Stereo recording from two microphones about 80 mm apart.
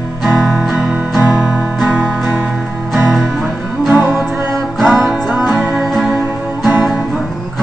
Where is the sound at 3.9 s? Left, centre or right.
Right.